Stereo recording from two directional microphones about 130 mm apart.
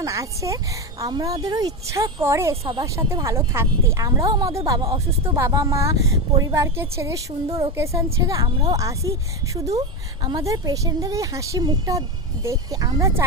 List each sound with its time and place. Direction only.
0.0 s a woman's voice: 25° right (ahead or behind)
4.9 s speech: 45° right (ahead or behind)
5.4 s a woman's voice: 25° right (ahead or behind)
7.4 s speech: 45° right (ahead or behind)
7.8 s a woman's voice: 25° right (ahead or behind)
10.2 s a woman's voice: 30° right (ahead or behind)